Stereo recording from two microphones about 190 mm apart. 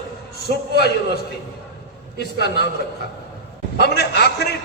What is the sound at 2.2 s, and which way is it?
Speech, 60° left (ahead or behind).